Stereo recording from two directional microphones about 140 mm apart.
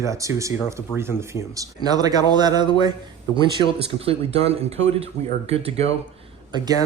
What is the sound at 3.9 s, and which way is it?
Speech, 45° right (ahead or behind).